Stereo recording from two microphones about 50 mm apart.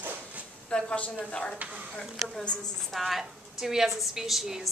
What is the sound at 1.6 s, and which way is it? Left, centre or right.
Speech, right.